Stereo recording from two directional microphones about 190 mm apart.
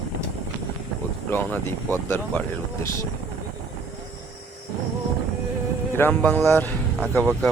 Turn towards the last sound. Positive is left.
turn(degrees=10)  # may be behind; listen again after turning